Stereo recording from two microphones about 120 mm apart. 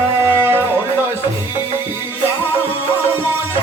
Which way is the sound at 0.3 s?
20° right (ahead or behind).